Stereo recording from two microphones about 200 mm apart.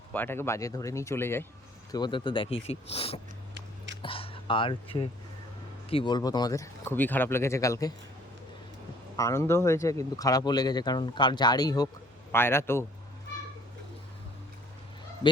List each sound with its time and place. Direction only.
0.1 s speech: 10° left (ahead or behind)
1.9 s speech: 20° left (ahead or behind)
9.1 s speech: 15° left (ahead or behind)
15.2 s speech: 20° left (ahead or behind)